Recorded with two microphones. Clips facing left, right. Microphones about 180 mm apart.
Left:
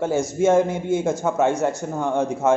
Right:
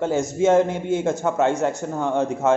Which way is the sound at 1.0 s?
Centre (ahead or behind).